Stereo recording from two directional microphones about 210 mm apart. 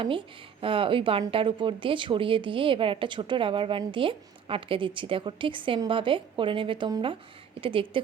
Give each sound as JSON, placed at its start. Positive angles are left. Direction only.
{"t": 0.0, "sound": "speech", "side_deg": -25}